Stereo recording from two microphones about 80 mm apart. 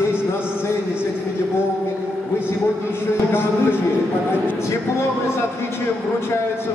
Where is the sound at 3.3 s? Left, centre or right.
Left.